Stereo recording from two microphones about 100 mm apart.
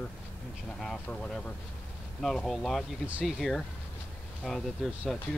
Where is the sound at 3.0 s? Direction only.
15° right (ahead or behind).